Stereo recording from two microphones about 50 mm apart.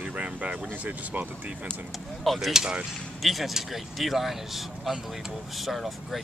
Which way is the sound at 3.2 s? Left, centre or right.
Centre.